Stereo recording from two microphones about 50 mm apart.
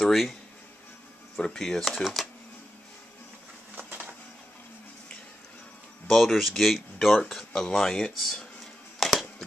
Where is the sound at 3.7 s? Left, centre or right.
Right.